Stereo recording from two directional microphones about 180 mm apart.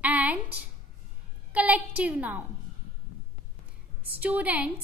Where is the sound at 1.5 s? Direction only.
10° right (ahead or behind).